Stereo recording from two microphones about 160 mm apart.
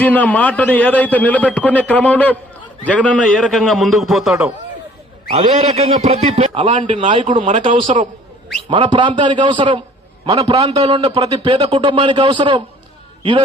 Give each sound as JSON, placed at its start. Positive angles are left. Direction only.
{"t": 0.0, "sound": "a man's voice", "side_deg": 10}
{"t": 5.3, "sound": "a man's voice", "side_deg": -40}
{"t": 7.3, "sound": "speech", "side_deg": -50}
{"t": 8.7, "sound": "a man's voice", "side_deg": -30}